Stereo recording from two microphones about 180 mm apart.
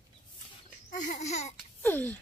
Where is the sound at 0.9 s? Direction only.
45° left (ahead or behind).